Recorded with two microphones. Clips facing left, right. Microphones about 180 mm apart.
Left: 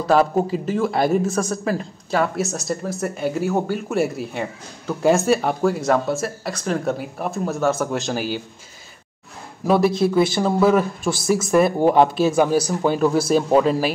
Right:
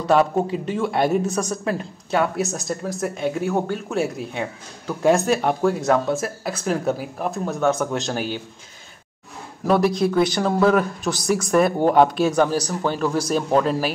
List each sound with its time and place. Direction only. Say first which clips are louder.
0.0 s speech: left 1 dB; centre (ahead or behind)
9.7 s speech: left 1 dB; 5° left (ahead or behind)